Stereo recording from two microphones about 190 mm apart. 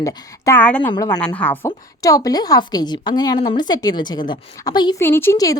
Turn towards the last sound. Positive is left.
turn(degrees=15)  # may be behind; listen again after turning